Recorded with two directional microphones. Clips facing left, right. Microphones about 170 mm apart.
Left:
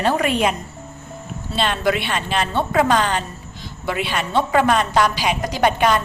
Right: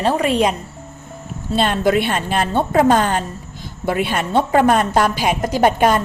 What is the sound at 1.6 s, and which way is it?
A woman's voice, 45° right (ahead or behind).